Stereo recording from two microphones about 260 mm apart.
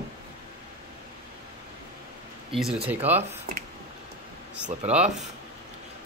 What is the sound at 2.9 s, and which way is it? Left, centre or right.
Speech, centre.